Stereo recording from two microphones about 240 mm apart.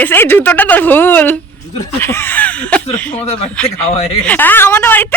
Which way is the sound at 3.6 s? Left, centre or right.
Left.